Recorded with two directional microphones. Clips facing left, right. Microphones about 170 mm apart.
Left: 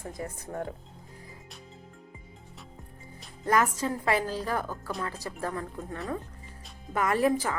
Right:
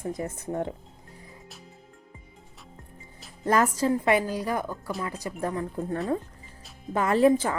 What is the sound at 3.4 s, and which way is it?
Speech, 35° right (ahead or behind).